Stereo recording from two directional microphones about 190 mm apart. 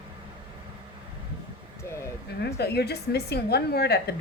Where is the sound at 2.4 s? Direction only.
60° left (ahead or behind).